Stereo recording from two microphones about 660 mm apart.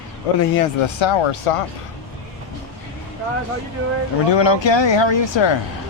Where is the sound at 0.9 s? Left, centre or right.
Left.